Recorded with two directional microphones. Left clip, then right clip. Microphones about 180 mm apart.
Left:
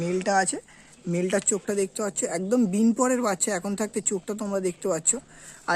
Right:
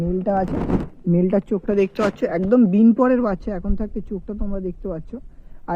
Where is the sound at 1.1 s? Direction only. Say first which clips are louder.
Right 5 dB; 45° right (ahead or behind).